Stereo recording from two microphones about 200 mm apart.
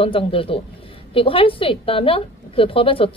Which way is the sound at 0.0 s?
25° left (ahead or behind).